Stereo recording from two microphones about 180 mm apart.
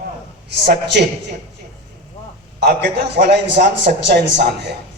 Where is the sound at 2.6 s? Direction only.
65° right (ahead or behind).